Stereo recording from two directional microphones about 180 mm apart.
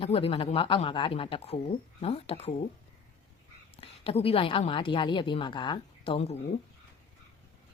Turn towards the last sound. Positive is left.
turn(degrees=35)  # may be behind; listen again after turning